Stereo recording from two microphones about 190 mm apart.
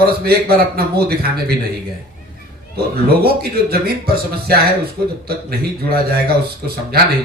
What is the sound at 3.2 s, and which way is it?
Speech, 55° right (ahead or behind).